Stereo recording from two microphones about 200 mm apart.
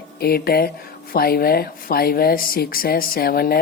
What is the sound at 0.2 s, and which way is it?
Speech, 50° left (ahead or behind).